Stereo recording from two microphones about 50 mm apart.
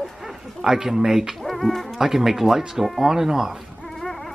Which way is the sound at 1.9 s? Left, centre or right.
Centre.